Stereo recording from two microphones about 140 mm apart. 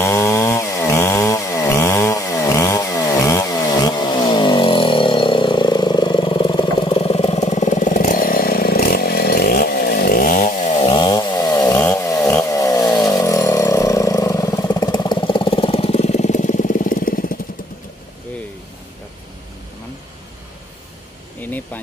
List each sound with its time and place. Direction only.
0.0 s chainsaw: 20° left (ahead or behind); by 10.7 s 80° left
10.8 s chainsaw: 40° left (ahead or behind); by 17.4 s 85° left
21.4 s a sound: 10° left (ahead or behind)